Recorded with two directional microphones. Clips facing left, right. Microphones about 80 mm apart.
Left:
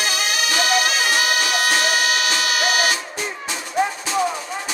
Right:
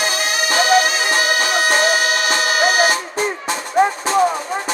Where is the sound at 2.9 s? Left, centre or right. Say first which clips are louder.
Right 6 dB; right.